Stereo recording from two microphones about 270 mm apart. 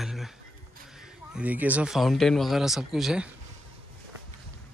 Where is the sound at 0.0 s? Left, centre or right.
Centre.